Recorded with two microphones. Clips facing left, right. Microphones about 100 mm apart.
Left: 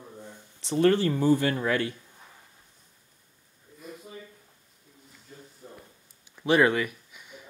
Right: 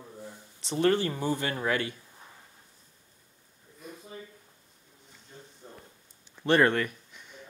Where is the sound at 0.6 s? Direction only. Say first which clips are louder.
Left 3 dB; 20° right (ahead or behind).